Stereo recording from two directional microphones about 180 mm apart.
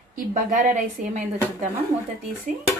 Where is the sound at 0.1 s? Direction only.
45° right (ahead or behind).